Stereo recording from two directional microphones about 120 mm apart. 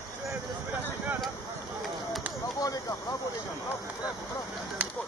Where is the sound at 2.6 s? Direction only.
30° left (ahead or behind).